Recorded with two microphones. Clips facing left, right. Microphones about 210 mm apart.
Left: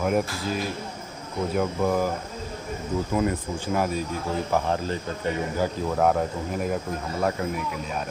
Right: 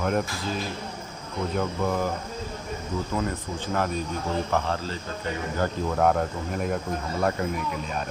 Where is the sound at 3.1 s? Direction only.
15° left (ahead or behind).